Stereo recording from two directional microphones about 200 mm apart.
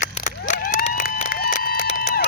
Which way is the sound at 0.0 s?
40° left (ahead or behind).